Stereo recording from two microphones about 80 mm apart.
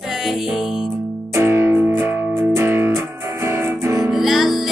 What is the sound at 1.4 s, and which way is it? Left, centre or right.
Music, right.